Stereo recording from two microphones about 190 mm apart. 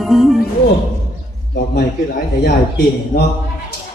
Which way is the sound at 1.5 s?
55° left (ahead or behind).